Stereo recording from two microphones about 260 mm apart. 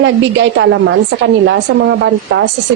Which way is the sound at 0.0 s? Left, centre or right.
Right.